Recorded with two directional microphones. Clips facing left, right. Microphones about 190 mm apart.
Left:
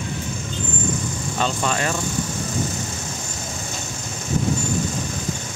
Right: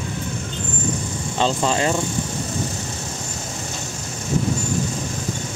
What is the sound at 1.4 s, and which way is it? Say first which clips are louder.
Speech: right 4 dB; 25° right (ahead or behind).